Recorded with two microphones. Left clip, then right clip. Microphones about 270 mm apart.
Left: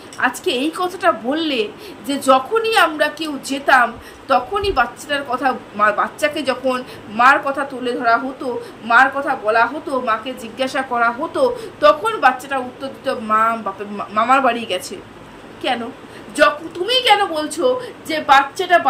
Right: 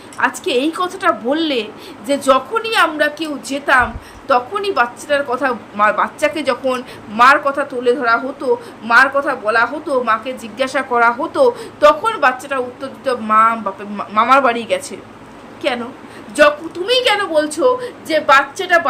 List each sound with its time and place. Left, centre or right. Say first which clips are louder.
0.2 s a woman's voice: right 2 dB; centre
16.3 s a woman's voice: right 3 dB; centre